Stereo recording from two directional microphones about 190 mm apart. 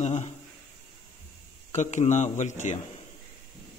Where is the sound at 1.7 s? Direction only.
40° left (ahead or behind).